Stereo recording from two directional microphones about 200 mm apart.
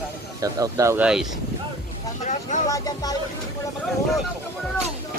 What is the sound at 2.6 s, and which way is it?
Speech, 15° left (ahead or behind).